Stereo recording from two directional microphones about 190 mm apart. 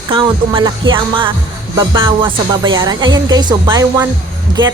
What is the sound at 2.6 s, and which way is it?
Music, 20° right (ahead or behind).